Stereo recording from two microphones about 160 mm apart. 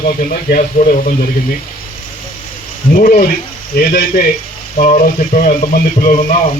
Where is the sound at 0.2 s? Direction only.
60° left (ahead or behind).